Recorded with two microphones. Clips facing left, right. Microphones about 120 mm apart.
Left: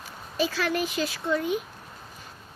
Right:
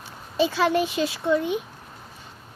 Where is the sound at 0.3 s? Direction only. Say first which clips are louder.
Right 5 dB; 25° right (ahead or behind).